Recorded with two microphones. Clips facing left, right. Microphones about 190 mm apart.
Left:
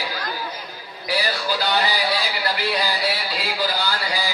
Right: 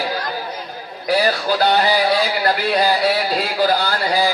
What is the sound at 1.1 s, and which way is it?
A man's voice, 50° right (ahead or behind).